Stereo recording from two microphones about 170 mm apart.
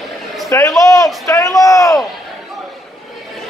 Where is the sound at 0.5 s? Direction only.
15° left (ahead or behind).